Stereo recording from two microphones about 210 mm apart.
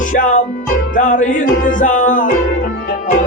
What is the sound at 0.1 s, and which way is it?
Music, 35° left (ahead or behind).